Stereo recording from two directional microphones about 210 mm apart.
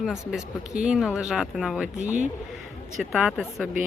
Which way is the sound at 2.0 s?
35° right (ahead or behind).